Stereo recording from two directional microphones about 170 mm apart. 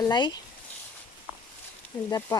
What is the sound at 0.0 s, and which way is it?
Speech, 25° left (ahead or behind).